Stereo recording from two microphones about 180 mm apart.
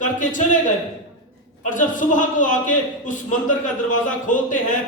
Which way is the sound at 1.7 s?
45° left (ahead or behind).